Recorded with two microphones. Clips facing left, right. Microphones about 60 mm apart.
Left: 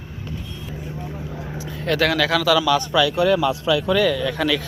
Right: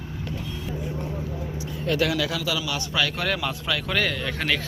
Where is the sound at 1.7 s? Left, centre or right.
Left.